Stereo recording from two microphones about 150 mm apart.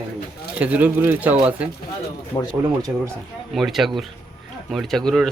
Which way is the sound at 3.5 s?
Centre (ahead or behind).